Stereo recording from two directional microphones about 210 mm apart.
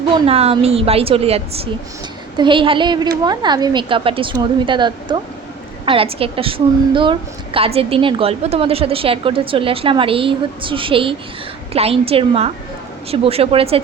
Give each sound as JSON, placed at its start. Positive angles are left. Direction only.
{"t": 0.3, "sound": "a woman's voice", "side_deg": -30}